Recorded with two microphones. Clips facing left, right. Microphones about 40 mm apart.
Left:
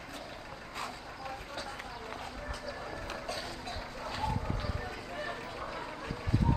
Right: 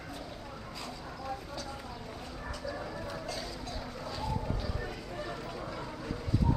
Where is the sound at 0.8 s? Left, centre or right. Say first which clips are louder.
Left 1 dB; left.